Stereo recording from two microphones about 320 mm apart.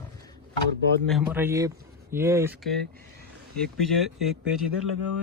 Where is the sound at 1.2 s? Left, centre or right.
Centre.